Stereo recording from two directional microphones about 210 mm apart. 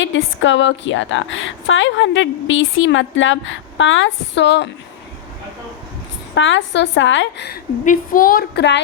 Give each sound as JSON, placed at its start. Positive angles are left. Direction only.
{"t": 0.0, "sound": "a woman's voice", "side_deg": 65}
{"t": 6.3, "sound": "a woman's voice", "side_deg": 60}